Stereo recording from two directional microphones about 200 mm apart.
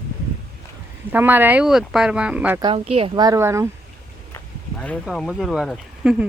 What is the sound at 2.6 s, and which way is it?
A woman's voice, 30° right (ahead or behind).